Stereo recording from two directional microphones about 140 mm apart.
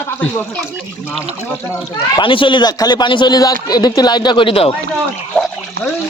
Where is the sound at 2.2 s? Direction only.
35° left (ahead or behind).